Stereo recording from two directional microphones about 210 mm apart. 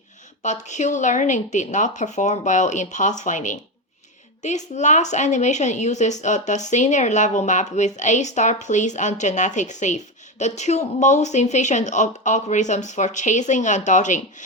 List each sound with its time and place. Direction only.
0.4 s a woman's voice: 35° left (ahead or behind)